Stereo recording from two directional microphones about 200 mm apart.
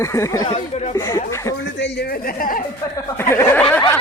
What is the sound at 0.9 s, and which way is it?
Speech, 15° left (ahead or behind).